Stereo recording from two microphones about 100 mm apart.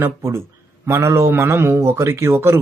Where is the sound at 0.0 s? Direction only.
25° right (ahead or behind).